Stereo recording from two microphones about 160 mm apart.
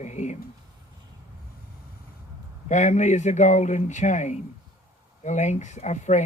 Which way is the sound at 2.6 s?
45° left (ahead or behind).